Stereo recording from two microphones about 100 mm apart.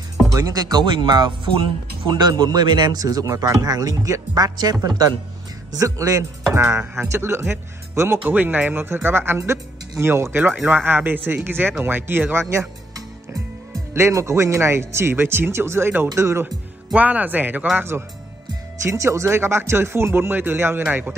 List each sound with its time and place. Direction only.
0.3 s speech: 40° right (ahead or behind); by 12.4 s 20° right (ahead or behind)
12.4 s music: 30° right (ahead or behind)
13.9 s speech: 30° right (ahead or behind)
16.4 s speech: 15° right (ahead or behind)